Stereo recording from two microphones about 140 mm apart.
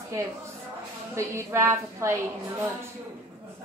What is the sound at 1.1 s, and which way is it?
A woman's voice, 20° right (ahead or behind).